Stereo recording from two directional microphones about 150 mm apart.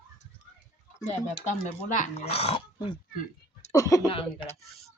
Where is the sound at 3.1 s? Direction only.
60° left (ahead or behind).